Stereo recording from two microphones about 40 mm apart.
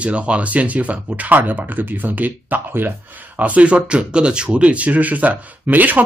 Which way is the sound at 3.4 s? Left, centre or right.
Right.